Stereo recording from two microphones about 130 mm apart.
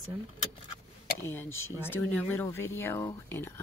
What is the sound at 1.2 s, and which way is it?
Speech, 20° left (ahead or behind).